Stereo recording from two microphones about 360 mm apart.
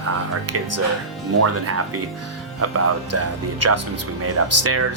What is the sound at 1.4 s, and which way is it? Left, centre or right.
Speech, right.